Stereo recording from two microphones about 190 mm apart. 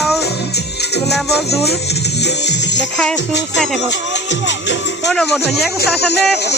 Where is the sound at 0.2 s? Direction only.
60° left (ahead or behind).